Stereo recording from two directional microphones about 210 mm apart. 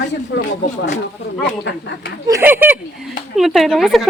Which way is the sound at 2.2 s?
10° right (ahead or behind).